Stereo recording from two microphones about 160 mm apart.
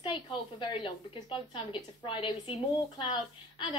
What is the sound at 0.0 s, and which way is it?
A woman's voice, 30° left (ahead or behind).